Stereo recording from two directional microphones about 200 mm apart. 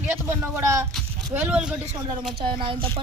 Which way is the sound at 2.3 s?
25° right (ahead or behind).